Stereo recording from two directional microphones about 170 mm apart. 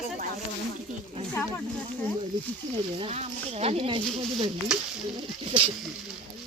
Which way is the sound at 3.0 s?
40° right (ahead or behind).